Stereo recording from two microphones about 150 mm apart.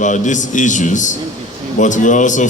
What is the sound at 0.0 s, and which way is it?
A man's voice, 55° left (ahead or behind).